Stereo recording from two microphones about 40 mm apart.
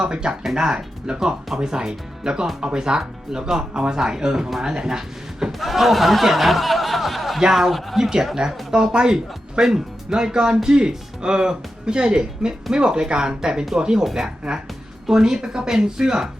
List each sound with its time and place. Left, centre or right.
0.0 s speech: centre
5.5 s speech: centre
8.7 s speech: right